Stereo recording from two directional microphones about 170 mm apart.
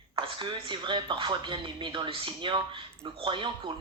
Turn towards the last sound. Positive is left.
turn(degrees=-30)  # may be behind; listen again after turning